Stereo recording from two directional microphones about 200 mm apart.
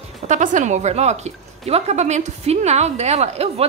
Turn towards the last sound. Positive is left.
turn(degrees=-30)  # may be behind; listen again after turning